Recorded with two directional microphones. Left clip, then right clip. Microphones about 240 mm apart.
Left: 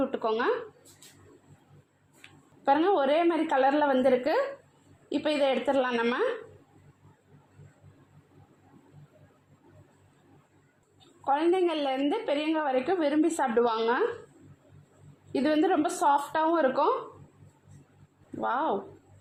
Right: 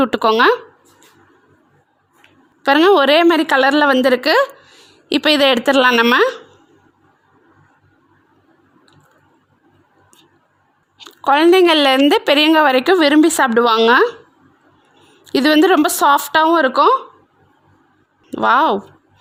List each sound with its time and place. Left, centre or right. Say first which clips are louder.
0.0 s speech: right 15 dB; right
2.6 s speech: right 13 dB; right
10.9 s speech: right 14 dB; right
15.3 s speech: right 13 dB; right
18.3 s speech: right 15 dB; right